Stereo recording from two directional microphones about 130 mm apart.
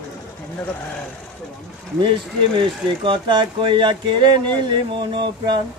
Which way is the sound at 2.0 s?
40° right (ahead or behind).